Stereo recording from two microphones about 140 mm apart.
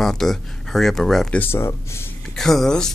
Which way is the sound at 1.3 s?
15° left (ahead or behind).